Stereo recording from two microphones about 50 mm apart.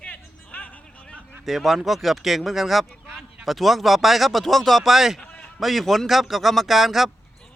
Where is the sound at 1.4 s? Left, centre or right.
Centre.